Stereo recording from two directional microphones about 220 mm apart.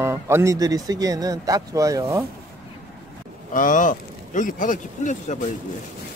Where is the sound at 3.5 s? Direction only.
35° left (ahead or behind).